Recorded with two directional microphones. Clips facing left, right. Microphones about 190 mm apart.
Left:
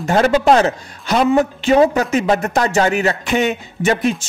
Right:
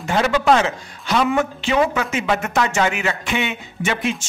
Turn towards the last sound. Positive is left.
turn(degrees=40)  # may be behind; listen again after turning